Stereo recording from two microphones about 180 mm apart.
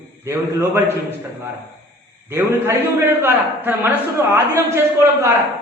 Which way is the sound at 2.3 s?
15° right (ahead or behind).